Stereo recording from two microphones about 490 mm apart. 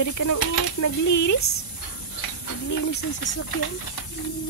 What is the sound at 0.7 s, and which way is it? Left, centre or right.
Speech, left.